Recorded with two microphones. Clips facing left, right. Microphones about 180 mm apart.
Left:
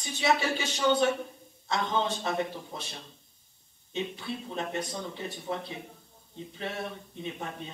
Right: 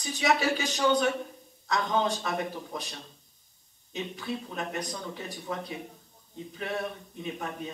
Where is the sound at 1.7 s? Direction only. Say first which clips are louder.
Right 2 dB; 25° left (ahead or behind).